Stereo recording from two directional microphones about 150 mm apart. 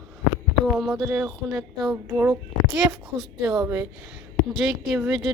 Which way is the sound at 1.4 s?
10° right (ahead or behind).